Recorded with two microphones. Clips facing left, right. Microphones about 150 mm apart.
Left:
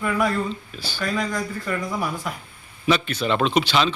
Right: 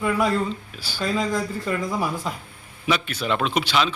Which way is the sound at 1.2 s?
25° right (ahead or behind).